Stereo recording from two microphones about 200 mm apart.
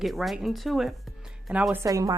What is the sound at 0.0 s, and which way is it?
A woman's voice, centre (ahead or behind).